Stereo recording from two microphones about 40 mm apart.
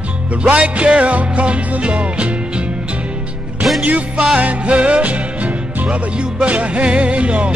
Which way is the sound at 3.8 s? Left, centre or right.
Right.